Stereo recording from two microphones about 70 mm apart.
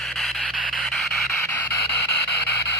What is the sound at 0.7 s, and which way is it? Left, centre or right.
Music, centre.